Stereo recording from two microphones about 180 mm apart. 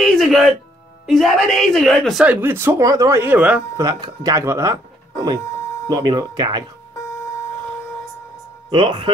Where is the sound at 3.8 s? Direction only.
20° right (ahead or behind).